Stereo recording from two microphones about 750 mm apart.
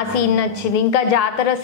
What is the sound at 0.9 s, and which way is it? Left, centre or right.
Speech, left.